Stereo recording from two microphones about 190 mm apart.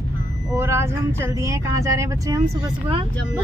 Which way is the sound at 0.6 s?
15° right (ahead or behind).